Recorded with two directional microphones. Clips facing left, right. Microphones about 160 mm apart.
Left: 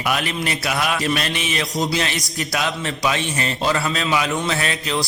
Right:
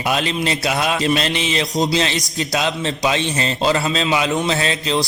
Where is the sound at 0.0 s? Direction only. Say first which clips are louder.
Right 3 dB; 25° right (ahead or behind).